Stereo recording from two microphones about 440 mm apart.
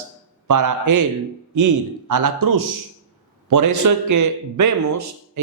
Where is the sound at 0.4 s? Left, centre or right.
Right.